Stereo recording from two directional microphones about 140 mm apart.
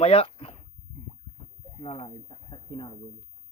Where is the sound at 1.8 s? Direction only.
40° left (ahead or behind).